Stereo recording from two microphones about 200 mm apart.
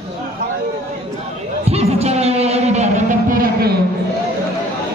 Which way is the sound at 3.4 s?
50° right (ahead or behind).